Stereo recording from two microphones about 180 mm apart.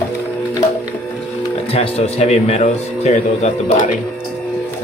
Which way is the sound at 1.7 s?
35° left (ahead or behind).